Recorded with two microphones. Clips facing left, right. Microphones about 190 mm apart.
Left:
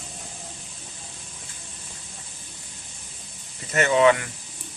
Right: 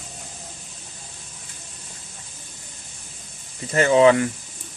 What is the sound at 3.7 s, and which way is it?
Speech, 30° right (ahead or behind).